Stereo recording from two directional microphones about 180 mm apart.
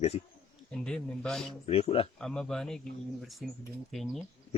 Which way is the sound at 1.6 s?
35° left (ahead or behind).